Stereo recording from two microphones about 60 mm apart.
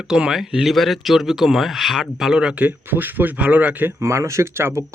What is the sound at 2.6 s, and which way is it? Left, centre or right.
Speech, right.